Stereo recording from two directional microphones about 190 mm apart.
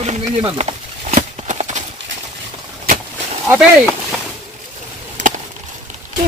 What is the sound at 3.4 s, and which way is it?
Speech, 5° right (ahead or behind).